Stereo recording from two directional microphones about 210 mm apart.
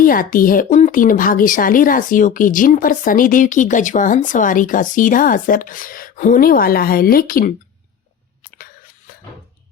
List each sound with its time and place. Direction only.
0.0 s speech: 40° left (ahead or behind)